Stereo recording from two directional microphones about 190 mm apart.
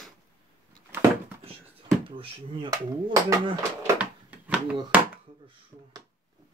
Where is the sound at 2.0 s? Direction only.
25° right (ahead or behind); by 4.7 s 5° right (ahead or behind).